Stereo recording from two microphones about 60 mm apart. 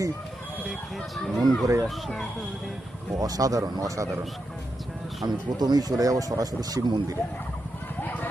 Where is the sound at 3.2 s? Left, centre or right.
Right.